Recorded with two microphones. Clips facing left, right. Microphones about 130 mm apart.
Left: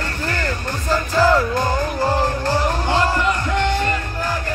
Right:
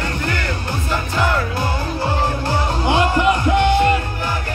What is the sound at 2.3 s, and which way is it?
Music, 10° right (ahead or behind).